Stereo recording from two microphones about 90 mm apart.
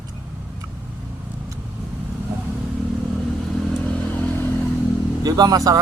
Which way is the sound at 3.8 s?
15° left (ahead or behind).